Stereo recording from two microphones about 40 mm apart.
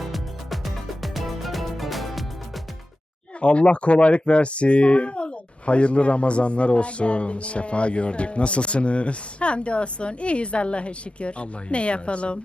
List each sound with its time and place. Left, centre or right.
0.0 s music: centre
3.4 s speech: left